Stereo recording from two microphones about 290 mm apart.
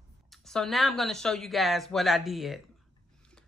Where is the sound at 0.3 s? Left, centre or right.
Centre.